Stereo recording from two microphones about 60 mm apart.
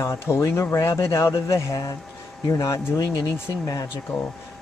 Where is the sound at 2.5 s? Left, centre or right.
Left.